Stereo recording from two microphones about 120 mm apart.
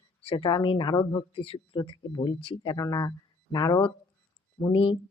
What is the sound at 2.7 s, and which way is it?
Speech, 30° left (ahead or behind).